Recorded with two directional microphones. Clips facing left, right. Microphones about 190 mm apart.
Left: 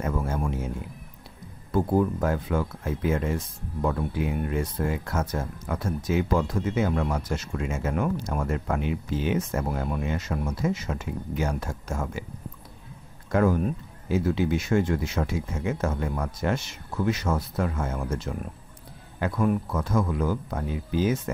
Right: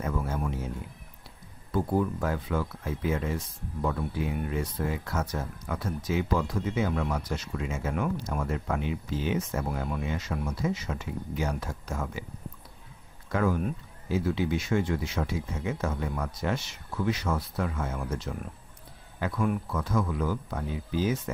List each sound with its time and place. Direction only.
0.0 s a sound: 45° left (ahead or behind)
1.7 s speech: 45° left (ahead or behind)
13.3 s speech: 50° left (ahead or behind)